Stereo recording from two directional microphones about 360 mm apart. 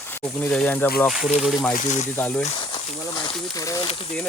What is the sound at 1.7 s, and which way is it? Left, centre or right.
Speech, left.